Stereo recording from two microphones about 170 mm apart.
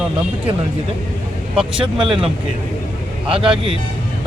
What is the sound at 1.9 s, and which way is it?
Speech, 30° right (ahead or behind).